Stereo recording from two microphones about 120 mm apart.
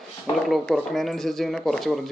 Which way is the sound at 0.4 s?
Centre (ahead or behind).